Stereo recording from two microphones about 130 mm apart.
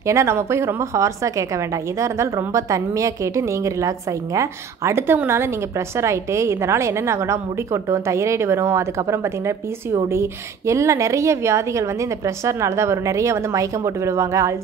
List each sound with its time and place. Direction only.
0.0 s a woman's voice: 20° right (ahead or behind)